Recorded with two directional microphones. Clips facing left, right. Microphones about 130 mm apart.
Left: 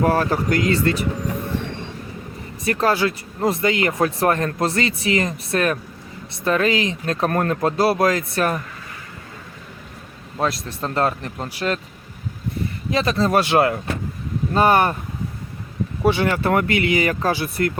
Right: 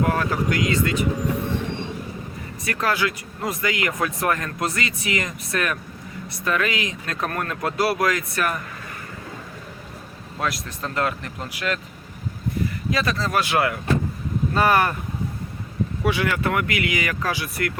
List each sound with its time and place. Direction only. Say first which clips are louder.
0.0 s speech: left 3 dB; 35° left (ahead or behind)
2.6 s speech: left 5 dB; 30° left (ahead or behind)
10.3 s speech: left 4 dB; 30° left (ahead or behind)
12.9 s speech: left 6 dB; 25° left (ahead or behind)
16.0 s speech: left 5 dB; 30° left (ahead or behind)